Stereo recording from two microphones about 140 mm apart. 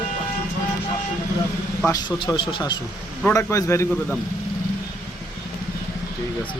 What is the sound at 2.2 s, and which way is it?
Speech, 35° left (ahead or behind).